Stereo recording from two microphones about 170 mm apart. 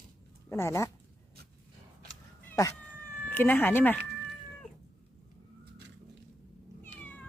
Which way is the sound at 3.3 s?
10° left (ahead or behind).